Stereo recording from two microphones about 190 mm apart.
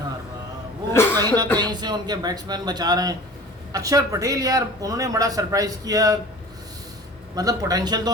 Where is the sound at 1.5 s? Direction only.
20° right (ahead or behind).